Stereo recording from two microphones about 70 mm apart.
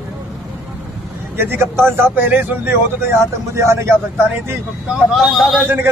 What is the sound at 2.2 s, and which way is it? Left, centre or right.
Speech, right.